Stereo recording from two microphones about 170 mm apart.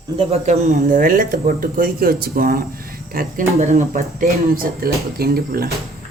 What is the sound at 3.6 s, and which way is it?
Speech, 45° right (ahead or behind).